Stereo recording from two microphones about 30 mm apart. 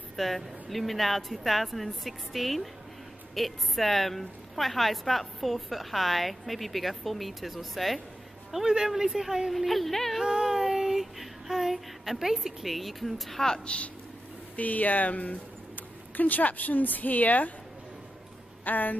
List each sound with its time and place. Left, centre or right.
0.1 s a sound: centre
0.7 s a woman's voice: centre
8.6 s a woman's voice: centre
9.6 s a woman's voice: centre
10.2 s music: right
10.5 s child singing: centre
12.2 s a woman's voice: centre
12.6 s a woman's voice: centre
13.7 s speech: left
14.6 s speech: left
16.2 s a woman's voice: left
18.6 s speech: left